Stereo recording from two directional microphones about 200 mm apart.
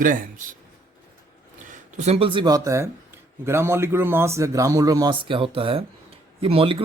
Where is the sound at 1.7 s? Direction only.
35° right (ahead or behind).